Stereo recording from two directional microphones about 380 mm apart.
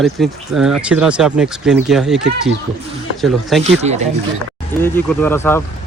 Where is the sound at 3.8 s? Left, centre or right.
Centre.